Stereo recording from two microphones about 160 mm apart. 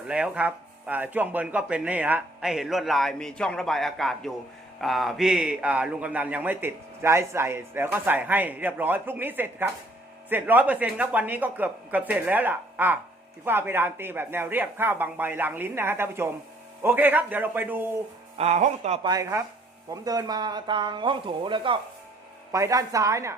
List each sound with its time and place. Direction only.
0.1 s a man's voice: 10° right (ahead or behind)
18.3 s speech: 45° right (ahead or behind)
19.0 s speech: 20° right (ahead or behind)
22.5 s speech: 20° right (ahead or behind)